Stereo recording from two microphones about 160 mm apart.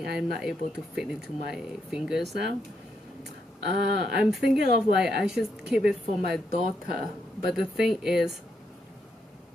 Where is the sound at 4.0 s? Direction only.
90° right.